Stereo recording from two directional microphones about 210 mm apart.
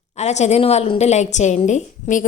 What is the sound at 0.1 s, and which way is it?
A woman's voice, 30° left (ahead or behind).